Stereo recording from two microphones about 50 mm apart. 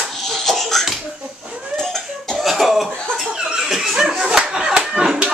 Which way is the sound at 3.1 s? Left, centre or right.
Centre.